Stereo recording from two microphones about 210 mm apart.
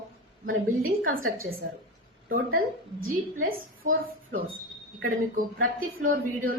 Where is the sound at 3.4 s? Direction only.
45° right (ahead or behind).